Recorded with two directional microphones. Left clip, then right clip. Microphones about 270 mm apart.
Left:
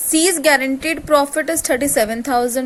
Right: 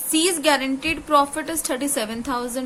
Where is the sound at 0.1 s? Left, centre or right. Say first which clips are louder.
Left 5 dB; centre.